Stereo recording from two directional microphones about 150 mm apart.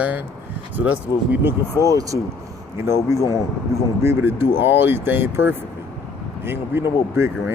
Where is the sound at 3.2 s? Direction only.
20° left (ahead or behind).